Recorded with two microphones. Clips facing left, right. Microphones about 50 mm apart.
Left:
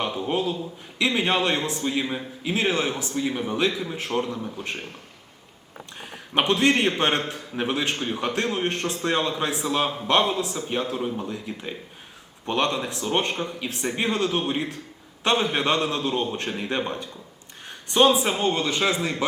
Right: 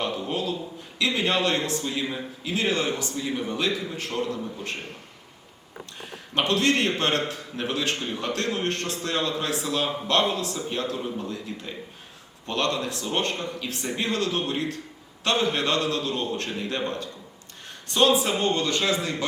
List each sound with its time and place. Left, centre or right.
0.0 s a man's voice: left
6.3 s a man's voice: centre